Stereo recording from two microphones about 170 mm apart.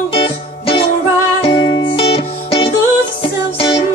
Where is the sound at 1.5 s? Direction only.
25° left (ahead or behind).